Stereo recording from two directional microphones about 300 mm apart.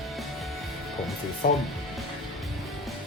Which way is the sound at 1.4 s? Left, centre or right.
Left.